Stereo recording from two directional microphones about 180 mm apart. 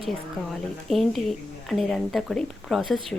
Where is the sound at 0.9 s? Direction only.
Centre (ahead or behind).